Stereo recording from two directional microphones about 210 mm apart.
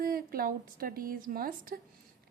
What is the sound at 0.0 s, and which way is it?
A woman's voice, 45° right (ahead or behind).